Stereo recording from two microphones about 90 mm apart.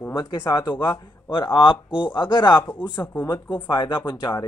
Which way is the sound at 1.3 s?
70° left (ahead or behind).